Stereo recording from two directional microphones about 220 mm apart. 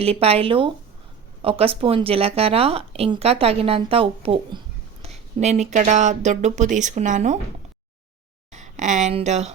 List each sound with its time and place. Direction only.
0.0 s a woman's voice: 25° right (ahead or behind)
8.5 s speech: 35° right (ahead or behind)